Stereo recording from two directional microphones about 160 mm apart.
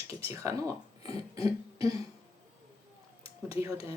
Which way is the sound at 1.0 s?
20° right (ahead or behind).